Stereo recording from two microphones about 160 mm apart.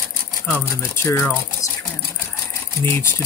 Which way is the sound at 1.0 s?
15° left (ahead or behind).